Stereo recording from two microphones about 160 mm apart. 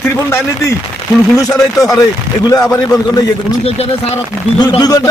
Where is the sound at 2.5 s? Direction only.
20° left (ahead or behind).